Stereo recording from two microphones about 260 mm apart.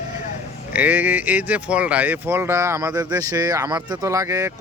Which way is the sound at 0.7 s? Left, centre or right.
Centre.